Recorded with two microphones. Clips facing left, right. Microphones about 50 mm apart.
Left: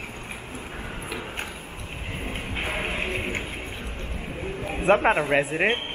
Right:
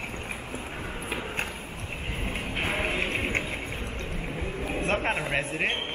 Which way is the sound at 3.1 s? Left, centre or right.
Right.